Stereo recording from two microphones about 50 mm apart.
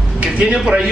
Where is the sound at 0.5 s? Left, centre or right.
Centre.